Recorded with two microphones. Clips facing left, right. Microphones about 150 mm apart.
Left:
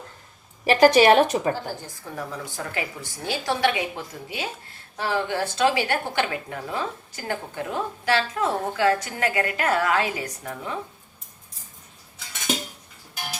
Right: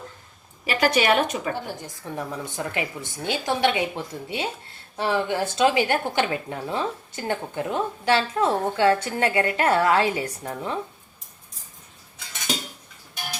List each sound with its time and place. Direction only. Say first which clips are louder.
0.6 s a woman's voice: left 6 dB; 40° left (ahead or behind)
2.1 s a woman's voice: right 2 dB; 20° right (ahead or behind)